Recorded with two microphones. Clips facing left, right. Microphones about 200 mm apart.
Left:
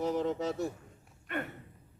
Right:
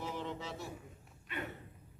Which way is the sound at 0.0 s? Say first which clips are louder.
Left 10 dB; 45° left (ahead or behind).